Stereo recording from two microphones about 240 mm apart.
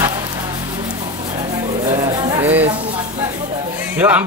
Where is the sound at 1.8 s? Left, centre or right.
Centre.